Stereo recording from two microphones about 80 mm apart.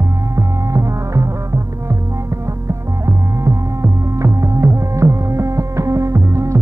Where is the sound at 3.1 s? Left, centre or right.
Right.